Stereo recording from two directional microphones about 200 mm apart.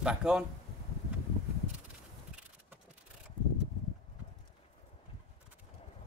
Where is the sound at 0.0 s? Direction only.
5° right (ahead or behind).